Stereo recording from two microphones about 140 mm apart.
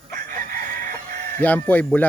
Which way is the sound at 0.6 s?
90° right.